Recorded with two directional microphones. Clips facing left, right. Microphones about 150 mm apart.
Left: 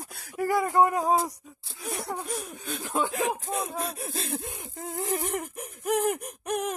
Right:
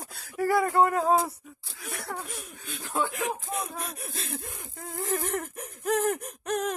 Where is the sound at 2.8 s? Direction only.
15° left (ahead or behind).